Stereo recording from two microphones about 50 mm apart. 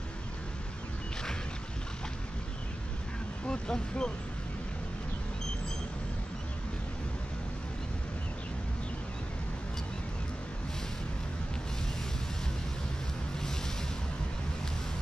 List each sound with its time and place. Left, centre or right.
3.4 s speech: centre